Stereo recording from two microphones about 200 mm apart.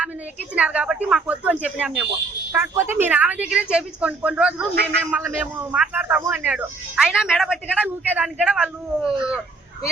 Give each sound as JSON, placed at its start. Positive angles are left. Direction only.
{"t": 0.6, "sound": "a woman's voice", "side_deg": -5}
{"t": 4.7, "sound": "a man's voice", "side_deg": -55}
{"t": 5.1, "sound": "speech", "side_deg": -10}